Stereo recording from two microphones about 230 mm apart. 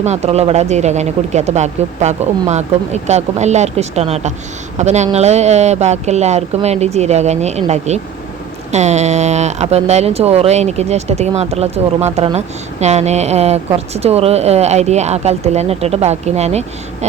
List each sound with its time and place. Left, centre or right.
0.0 s speech: right